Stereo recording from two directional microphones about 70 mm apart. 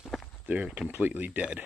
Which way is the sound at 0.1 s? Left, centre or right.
Centre.